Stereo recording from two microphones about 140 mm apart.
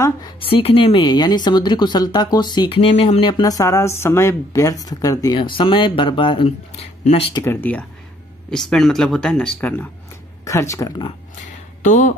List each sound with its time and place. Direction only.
0.4 s speech: 40° left (ahead or behind); by 5.4 s 25° left (ahead or behind)
5.4 s speech: 35° left (ahead or behind)
7.4 s speech: 10° left (ahead or behind)
11.8 s speech: 65° left (ahead or behind)